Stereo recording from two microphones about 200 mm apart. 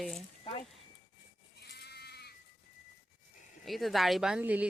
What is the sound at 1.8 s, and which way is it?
Sheep, 55° left (ahead or behind).